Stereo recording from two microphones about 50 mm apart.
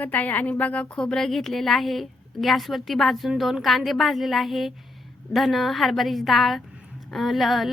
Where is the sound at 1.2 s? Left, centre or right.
Centre.